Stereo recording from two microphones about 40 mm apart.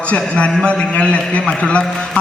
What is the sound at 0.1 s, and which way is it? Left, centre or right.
A man's voice, left.